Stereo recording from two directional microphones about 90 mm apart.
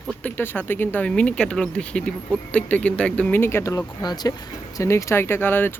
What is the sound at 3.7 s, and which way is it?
Speech, 50° left (ahead or behind).